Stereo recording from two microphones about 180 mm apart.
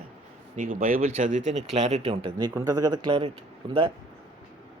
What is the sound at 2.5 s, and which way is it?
Speech, 15° right (ahead or behind).